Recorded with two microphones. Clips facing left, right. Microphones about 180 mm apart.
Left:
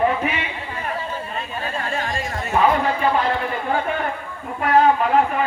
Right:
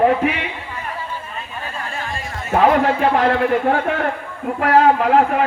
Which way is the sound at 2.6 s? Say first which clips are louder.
Right 4 dB; 70° right (ahead or behind).